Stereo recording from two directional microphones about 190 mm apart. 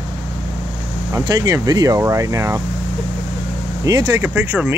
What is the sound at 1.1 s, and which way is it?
Speech, 20° right (ahead or behind).